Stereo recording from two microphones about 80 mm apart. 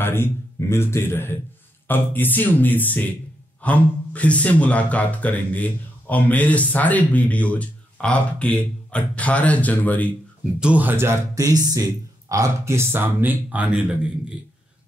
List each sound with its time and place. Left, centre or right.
0.0 s a man's voice: left
10.6 s speech: centre
11.3 s speech: right; by 13.9 s centre